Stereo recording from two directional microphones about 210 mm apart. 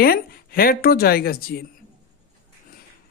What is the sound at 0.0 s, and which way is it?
Speech, 45° left (ahead or behind).